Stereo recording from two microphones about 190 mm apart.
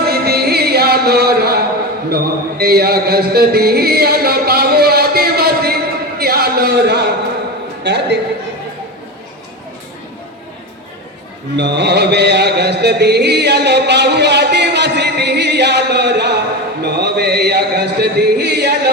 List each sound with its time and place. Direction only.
0.0 s music: 55° right (ahead or behind)
2.0 s a sound: 55° right (ahead or behind)
7.9 s music: 65° right (ahead or behind)
11.5 s music: 65° right (ahead or behind)